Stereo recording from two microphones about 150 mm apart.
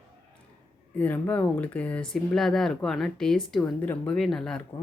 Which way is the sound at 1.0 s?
10° left (ahead or behind).